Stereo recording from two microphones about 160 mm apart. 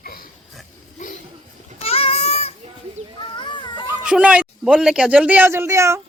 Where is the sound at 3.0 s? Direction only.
40° right (ahead or behind).